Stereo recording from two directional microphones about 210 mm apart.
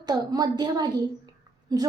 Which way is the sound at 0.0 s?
20° right (ahead or behind).